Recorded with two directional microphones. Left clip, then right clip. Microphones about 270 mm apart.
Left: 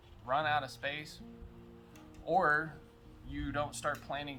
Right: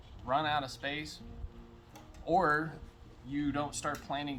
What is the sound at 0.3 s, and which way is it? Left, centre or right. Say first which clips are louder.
Speech: right 1 dB; centre.